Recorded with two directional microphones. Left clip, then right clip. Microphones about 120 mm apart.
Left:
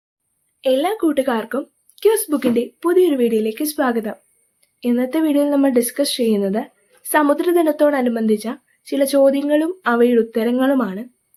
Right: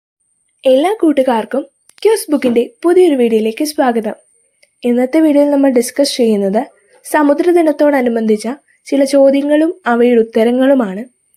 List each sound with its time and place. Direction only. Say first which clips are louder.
0.6 s speech: right 7 dB; 40° right (ahead or behind)